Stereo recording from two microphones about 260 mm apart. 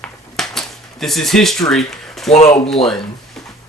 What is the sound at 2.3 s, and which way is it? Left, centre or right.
Speech, left.